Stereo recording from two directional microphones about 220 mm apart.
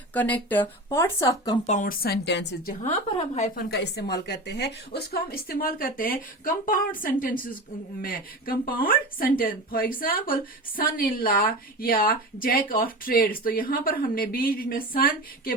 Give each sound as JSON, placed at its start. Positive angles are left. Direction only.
{"t": 0.1, "sound": "speech", "side_deg": 5}
{"t": 1.6, "sound": "a woman's voice", "side_deg": 35}
{"t": 3.1, "sound": "a woman's voice", "side_deg": 30}